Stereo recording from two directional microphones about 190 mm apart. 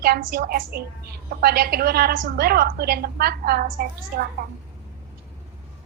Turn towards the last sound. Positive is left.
turn(degrees=-50)  # may be behind; listen again after turning